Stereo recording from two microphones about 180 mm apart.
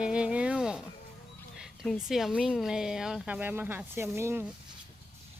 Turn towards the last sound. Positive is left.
turn(degrees=-15)  # may be behind; listen again after turning